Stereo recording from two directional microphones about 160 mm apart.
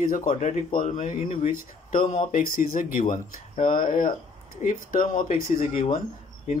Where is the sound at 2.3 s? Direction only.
60° left (ahead or behind).